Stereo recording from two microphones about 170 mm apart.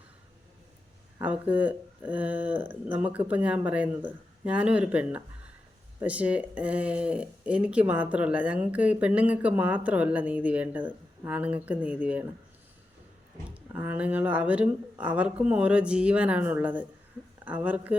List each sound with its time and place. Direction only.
1.2 s speech: 10° right (ahead or behind)
13.5 s speech: 10° right (ahead or behind)